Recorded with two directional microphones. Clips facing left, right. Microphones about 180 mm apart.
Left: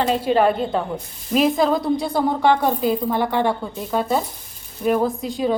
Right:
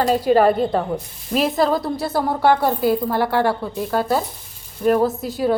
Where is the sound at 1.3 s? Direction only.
Centre (ahead or behind).